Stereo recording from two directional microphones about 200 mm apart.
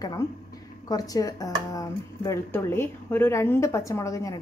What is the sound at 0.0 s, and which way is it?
Speech, 20° left (ahead or behind).